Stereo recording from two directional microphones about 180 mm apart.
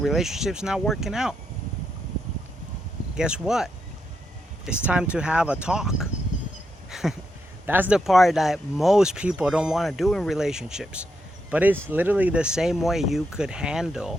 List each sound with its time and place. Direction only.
0.0 s speech: centre (ahead or behind)
3.2 s speech: 5° right (ahead or behind)
6.9 s a sound: centre (ahead or behind)
7.7 s speech: 10° right (ahead or behind)